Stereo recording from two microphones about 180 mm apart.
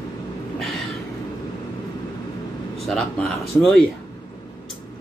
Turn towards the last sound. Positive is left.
turn(degrees=5)  # may be behind; listen again after turning